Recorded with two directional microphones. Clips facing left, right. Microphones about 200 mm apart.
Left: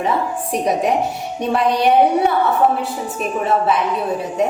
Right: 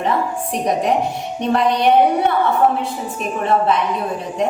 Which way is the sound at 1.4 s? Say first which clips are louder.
Even; 5° left (ahead or behind).